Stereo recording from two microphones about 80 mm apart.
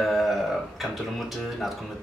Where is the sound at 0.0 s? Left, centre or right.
Centre.